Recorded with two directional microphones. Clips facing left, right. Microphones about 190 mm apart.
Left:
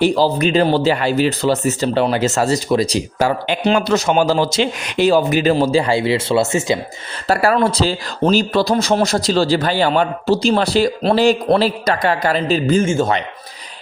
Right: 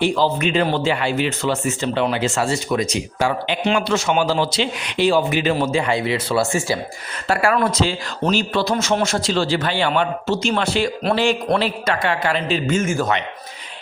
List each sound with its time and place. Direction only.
0.0 s speech: 35° left (ahead or behind); by 6.7 s 20° left (ahead or behind)
7.3 s speech: 35° left (ahead or behind)